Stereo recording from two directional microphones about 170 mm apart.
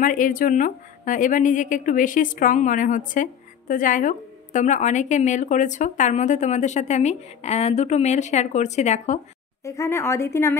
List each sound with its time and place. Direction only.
0.0 s a woman's voice: 50° left (ahead or behind)
9.7 s speech: 15° left (ahead or behind)